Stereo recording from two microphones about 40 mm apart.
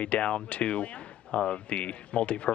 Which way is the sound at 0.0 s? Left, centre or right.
Left.